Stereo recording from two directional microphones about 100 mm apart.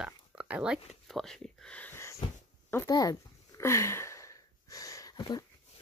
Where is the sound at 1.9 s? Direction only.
30° left (ahead or behind).